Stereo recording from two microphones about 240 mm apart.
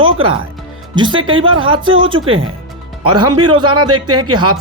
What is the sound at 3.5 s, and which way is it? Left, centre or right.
Speech, centre.